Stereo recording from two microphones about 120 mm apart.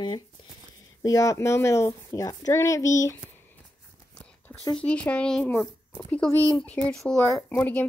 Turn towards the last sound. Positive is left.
turn(degrees=10)  # may be behind; listen again after turning